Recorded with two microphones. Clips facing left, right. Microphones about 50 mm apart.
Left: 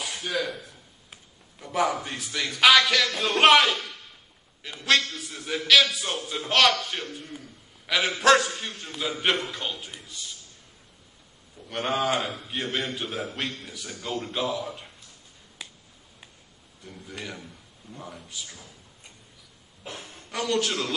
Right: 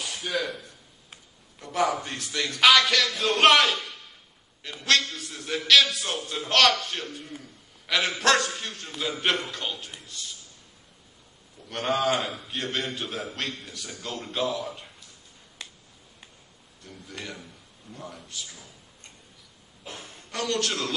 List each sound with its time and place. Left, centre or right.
0.0 s a sound: centre
2.9 s a man's voice: centre
11.7 s a man's voice: centre
15.6 s finger snapping: centre
16.8 s speech: centre
19.8 s speech: left
20.1 s a man's voice: centre